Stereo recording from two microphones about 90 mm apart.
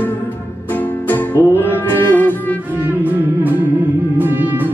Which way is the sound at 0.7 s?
20° left (ahead or behind).